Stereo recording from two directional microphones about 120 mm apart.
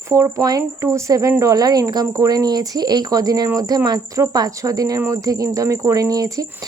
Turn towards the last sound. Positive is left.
turn(degrees=-30)  # may be behind; listen again after turning